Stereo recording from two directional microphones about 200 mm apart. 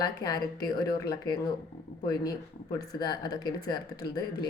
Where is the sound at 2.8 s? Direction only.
20° left (ahead or behind).